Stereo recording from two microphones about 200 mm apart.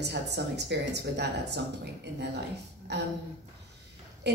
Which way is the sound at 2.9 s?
55° right (ahead or behind).